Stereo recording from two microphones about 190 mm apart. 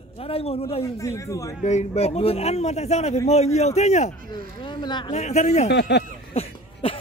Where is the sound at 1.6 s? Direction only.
35° left (ahead or behind).